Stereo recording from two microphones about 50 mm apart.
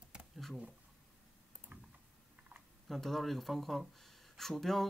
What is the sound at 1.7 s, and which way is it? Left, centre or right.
Typing, right.